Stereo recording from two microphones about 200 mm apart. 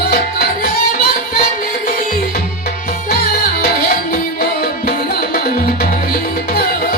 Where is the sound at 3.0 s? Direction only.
50° left (ahead or behind).